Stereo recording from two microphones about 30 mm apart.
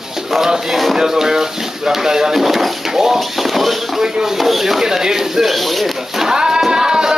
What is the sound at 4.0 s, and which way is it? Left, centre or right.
Speech, centre.